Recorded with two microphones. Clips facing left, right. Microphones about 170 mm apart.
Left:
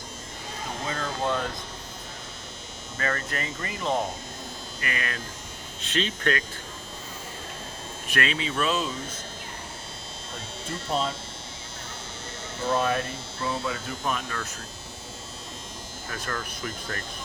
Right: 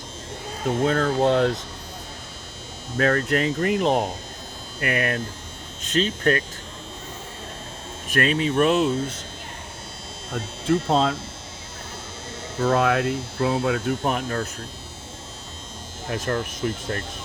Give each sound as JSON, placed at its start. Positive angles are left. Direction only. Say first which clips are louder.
{"t": 0.9, "sound": "speech", "louder": "right 8 dB", "side_deg": -60}
{"t": 3.0, "sound": "speech", "louder": "right 10 dB", "side_deg": -70}
{"t": 4.8, "sound": "hum", "louder": "right 9 dB", "side_deg": -60}
{"t": 5.8, "sound": "speech", "louder": "right 6 dB", "side_deg": -40}
{"t": 8.1, "sound": "hum", "louder": "right 7 dB", "side_deg": -45}
{"t": 10.3, "sound": "speech", "louder": "right 14 dB", "side_deg": -60}
{"t": 12.7, "sound": "hum", "louder": "right 5 dB", "side_deg": -85}
{"t": 16.2, "sound": "speech", "louder": "right 8 dB", "side_deg": -25}